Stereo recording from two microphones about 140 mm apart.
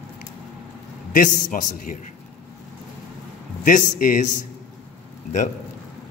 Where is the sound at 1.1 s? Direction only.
75° left (ahead or behind).